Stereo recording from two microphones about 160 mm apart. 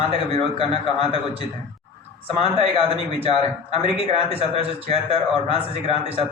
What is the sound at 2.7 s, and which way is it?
Speech, 35° right (ahead or behind).